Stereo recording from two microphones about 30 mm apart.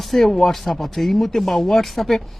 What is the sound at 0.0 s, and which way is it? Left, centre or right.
Speech, centre.